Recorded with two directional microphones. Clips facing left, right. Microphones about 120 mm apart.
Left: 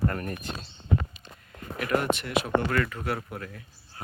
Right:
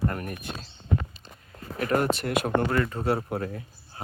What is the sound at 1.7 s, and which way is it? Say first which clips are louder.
Speech: right 2 dB; 40° right (ahead or behind).